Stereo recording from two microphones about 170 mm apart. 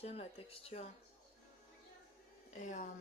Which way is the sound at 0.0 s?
35° left (ahead or behind).